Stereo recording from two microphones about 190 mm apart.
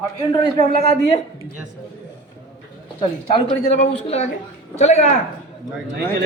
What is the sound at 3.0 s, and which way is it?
A woman's voice, 35° left (ahead or behind).